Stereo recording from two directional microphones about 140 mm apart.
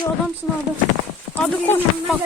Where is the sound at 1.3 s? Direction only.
15° left (ahead or behind).